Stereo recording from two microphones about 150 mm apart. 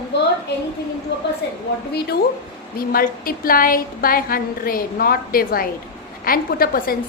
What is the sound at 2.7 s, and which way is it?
A woman's voice, 80° left.